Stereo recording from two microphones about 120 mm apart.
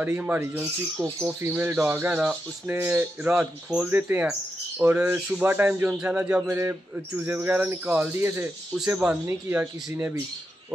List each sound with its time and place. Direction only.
0.0 s speech: 15° right (ahead or behind)
3.3 s speech: 5° right (ahead or behind)
3.9 s speech: 15° right (ahead or behind)
8.7 s speech: 5° right (ahead or behind)
9.3 s speech: 15° right (ahead or behind)